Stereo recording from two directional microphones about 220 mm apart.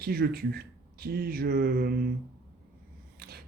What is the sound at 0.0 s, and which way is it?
Speech, 45° right (ahead or behind).